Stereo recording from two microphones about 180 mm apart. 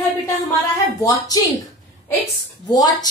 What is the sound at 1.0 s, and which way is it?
Speech, 20° left (ahead or behind).